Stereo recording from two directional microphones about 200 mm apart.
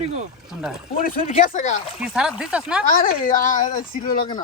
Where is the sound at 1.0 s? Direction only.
40° left (ahead or behind).